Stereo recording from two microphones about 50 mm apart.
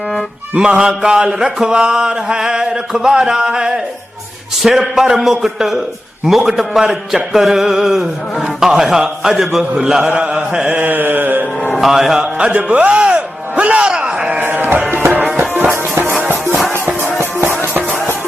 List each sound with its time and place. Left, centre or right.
0.6 s mantra: centre
6.2 s a man's voice: centre
6.5 s mantra: centre
10.7 s a sound: right
11.7 s music: centre
12.2 s speech: right
14.4 s music: right
15.7 s music: right
17.3 s music: right